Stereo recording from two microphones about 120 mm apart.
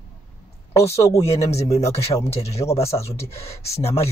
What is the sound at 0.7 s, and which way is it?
Speech, 25° left (ahead or behind).